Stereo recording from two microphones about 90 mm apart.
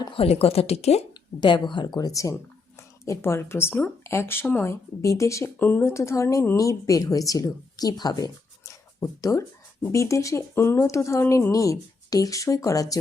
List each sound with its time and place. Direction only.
0.1 s speech: 90° left
1.1 s speech: 55° left (ahead or behind); by 2.3 s 40° left (ahead or behind)
3.0 s speech: 30° left (ahead or behind)
6.6 s speech: 40° left (ahead or behind)